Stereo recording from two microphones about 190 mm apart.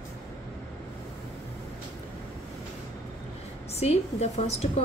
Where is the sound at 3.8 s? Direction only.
35° left (ahead or behind).